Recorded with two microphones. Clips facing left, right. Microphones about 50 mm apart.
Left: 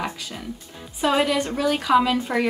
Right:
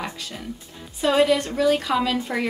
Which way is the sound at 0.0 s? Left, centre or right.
Centre.